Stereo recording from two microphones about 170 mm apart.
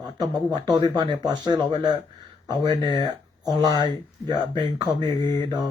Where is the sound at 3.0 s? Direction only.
25° right (ahead or behind).